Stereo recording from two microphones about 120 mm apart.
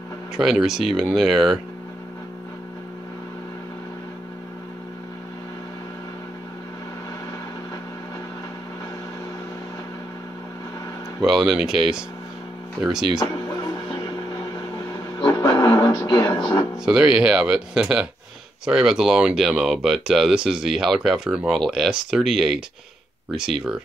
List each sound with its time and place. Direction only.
0.4 s speech: 5° right (ahead or behind)
11.1 s speech: 5° right (ahead or behind)
15.2 s music: 30° left (ahead or behind)
16.3 s speech: 35° left (ahead or behind)
16.8 s speech: 5° right (ahead or behind)